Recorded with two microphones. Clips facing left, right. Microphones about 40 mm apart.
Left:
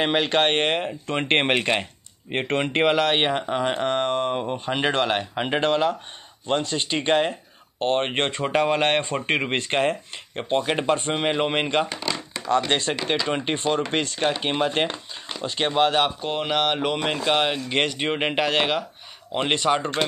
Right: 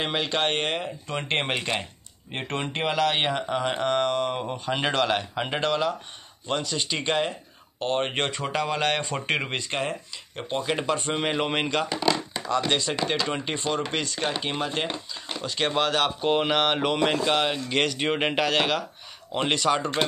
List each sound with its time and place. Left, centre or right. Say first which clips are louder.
0.2 s speech: left 5 dB; left
3.2 s speech: left 3 dB; left
4.4 s speech: left 3 dB; centre
7.8 s speech: left 3 dB; left
9.2 s speech: left 3 dB; centre
9.6 s speech: left 6 dB; left
11.1 s speech: left 3 dB; centre
12.4 s speech: left 3 dB; left
15.4 s speech: left 4 dB; left
16.2 s speech: right 1 dB; centre
17.2 s speech: left 2 dB; centre